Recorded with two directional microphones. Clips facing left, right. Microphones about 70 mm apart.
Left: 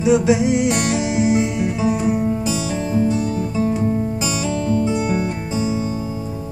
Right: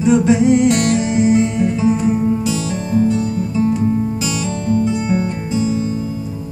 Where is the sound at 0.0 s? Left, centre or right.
Centre.